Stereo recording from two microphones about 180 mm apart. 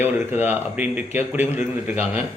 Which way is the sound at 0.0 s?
10° right (ahead or behind).